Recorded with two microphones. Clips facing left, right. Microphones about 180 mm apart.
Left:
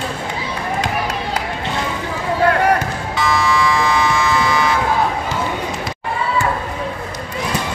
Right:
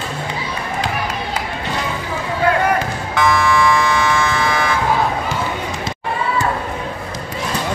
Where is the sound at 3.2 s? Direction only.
55° right (ahead or behind).